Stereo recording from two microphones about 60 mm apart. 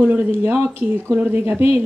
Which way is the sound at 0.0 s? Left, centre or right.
Right.